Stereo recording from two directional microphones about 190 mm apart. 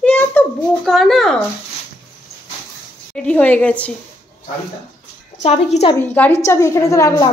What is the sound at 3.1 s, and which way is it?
Speech, 5° left (ahead or behind).